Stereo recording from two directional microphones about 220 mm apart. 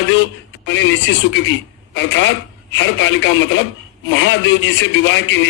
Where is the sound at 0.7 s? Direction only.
55° left (ahead or behind).